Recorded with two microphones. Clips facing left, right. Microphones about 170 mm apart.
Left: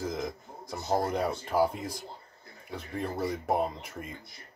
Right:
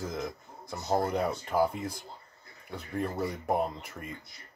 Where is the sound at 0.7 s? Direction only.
10° left (ahead or behind).